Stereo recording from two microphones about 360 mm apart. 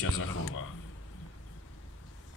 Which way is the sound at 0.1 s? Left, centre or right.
Left.